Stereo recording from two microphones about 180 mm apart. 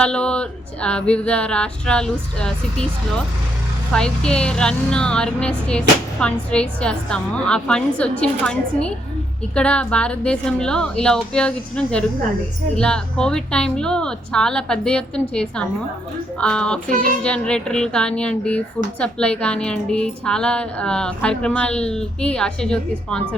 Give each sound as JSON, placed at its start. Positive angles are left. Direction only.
{"t": 0.0, "sound": "a woman's voice", "side_deg": 5}